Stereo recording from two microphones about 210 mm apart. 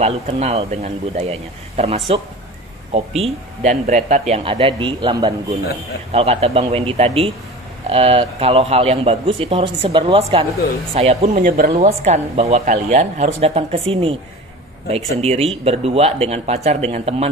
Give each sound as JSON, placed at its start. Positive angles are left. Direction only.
{"t": 0.0, "sound": "speech", "side_deg": -30}
{"t": 11.4, "sound": "speech", "side_deg": -40}